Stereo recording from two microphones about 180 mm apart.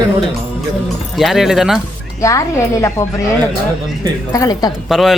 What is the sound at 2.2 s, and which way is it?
Speech, 15° left (ahead or behind).